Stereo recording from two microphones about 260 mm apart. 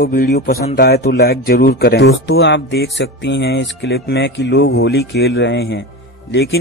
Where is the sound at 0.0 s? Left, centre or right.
Left.